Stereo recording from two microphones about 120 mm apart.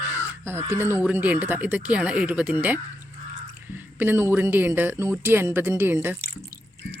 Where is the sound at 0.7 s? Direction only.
20° right (ahead or behind).